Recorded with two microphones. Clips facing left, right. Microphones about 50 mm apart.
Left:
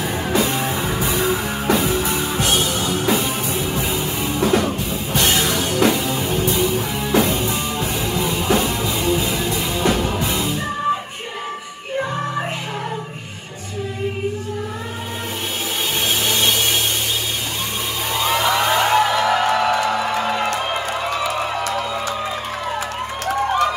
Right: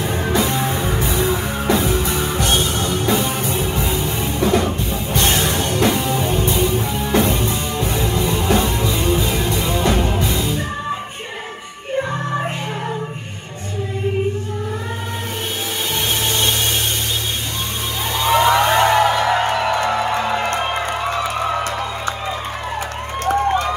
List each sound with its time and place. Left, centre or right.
0.0 s music: right
16.3 s a sound: right
18.1 s music: right